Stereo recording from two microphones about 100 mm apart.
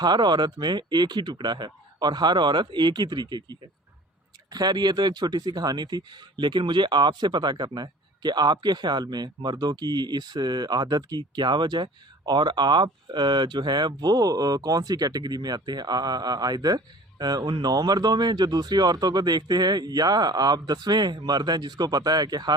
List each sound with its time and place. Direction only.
0.0 s speech: 45° right (ahead or behind)